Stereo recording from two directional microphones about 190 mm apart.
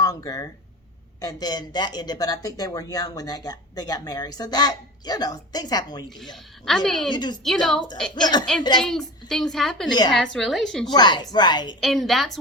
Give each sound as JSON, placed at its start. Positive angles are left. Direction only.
{"t": 0.0, "sound": "a sound", "side_deg": 20}
{"t": 1.2, "sound": "speech", "side_deg": 20}
{"t": 6.3, "sound": "a child's voice", "side_deg": 0}
{"t": 7.1, "sound": "speech", "side_deg": 20}
{"t": 7.4, "sound": "a child's voice", "side_deg": 0}
{"t": 8.1, "sound": "speech", "side_deg": 20}
{"t": 8.8, "sound": "a child's voice", "side_deg": 0}
{"t": 10.8, "sound": "speech", "side_deg": 20}
{"t": 11.8, "sound": "a child's voice", "side_deg": 0}